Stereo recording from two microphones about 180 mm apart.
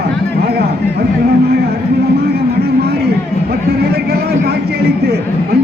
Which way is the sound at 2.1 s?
60° right (ahead or behind).